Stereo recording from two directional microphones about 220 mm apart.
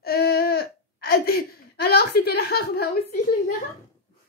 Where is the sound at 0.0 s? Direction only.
45° left (ahead or behind).